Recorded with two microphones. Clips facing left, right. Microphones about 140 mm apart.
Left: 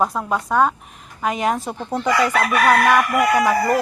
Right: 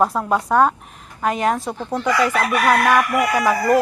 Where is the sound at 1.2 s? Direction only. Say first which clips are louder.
Right 1 dB; 10° left (ahead or behind).